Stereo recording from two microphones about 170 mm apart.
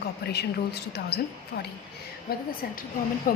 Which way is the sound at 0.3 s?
75° left (ahead or behind).